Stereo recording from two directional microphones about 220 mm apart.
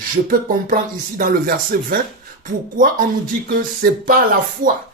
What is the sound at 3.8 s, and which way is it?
Speech, 40° right (ahead or behind).